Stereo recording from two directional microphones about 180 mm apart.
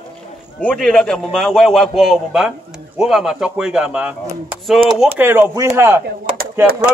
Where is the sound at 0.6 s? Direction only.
5° left (ahead or behind).